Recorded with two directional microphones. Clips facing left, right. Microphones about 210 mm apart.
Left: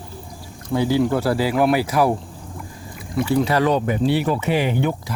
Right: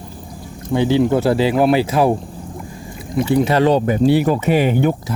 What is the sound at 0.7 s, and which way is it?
Speech, 20° right (ahead or behind).